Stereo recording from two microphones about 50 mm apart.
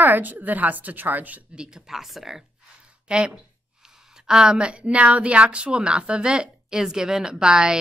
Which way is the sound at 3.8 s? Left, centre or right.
Centre.